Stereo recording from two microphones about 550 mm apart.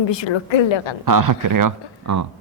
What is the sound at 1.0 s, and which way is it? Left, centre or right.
Speech, right.